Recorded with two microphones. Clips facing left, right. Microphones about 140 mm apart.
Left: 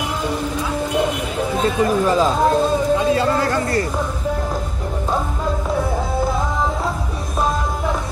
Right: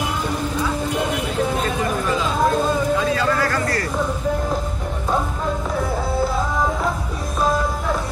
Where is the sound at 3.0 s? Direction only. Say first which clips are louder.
Left 3 dB; 25° left (ahead or behind).